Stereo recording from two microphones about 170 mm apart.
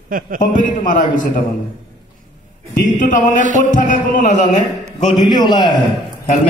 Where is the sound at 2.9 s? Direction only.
50° left (ahead or behind).